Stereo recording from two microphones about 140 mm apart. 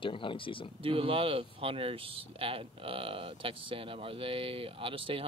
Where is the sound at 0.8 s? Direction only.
40° right (ahead or behind).